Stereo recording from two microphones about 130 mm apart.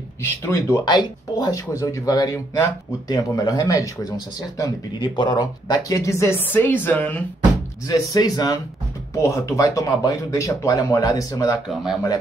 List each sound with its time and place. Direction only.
0.5 s speech: 20° left (ahead or behind)
0.8 s speech: 35° left (ahead or behind); by 7.2 s 15° left (ahead or behind)
7.8 s speech: 30° left (ahead or behind)
11.6 s speech: 5° right (ahead or behind)